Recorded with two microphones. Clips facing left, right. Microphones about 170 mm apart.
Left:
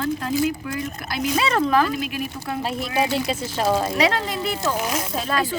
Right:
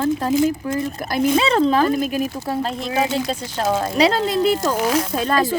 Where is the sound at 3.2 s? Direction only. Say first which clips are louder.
Even; 5° left (ahead or behind).